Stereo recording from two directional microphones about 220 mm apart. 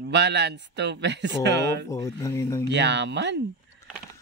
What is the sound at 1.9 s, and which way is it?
Speech, 15° left (ahead or behind).